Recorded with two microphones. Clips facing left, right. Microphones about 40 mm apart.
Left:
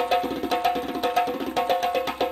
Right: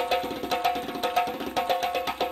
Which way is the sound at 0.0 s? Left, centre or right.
Centre.